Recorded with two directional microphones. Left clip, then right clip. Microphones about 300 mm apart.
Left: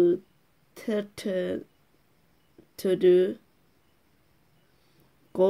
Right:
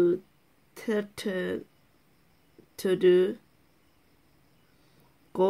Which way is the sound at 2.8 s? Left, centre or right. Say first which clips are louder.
Left 1 dB; centre.